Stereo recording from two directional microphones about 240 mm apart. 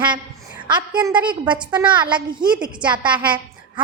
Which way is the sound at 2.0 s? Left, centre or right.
Centre.